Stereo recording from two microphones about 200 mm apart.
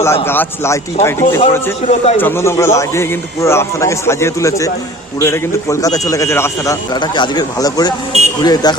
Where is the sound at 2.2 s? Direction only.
10° left (ahead or behind).